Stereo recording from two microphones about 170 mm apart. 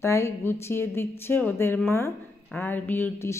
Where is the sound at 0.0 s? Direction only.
15° left (ahead or behind).